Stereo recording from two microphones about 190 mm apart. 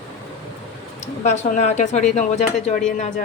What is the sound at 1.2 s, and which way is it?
Speech, 40° left (ahead or behind).